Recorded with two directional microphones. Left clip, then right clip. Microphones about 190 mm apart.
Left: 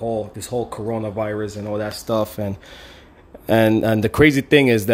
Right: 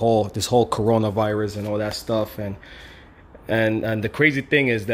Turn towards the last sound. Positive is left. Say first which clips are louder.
# left 5 dB
turn(degrees=35)  # may be behind; listen again after turning